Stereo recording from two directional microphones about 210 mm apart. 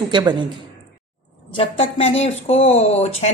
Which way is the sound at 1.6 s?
25° left (ahead or behind).